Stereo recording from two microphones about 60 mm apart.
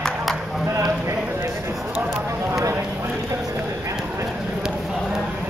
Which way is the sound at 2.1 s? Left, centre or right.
Right.